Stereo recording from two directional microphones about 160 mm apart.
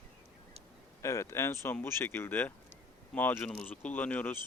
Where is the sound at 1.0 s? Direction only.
20° left (ahead or behind).